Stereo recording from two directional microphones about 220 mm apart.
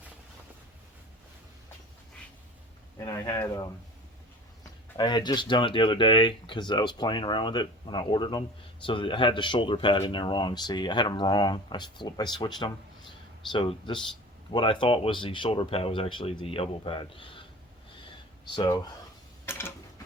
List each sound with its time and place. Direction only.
3.0 s speech: 15° left (ahead or behind)
4.9 s speech: 20° left (ahead or behind)
18.5 s speech: 20° left (ahead or behind)
19.5 s mechanisms: 10° left (ahead or behind)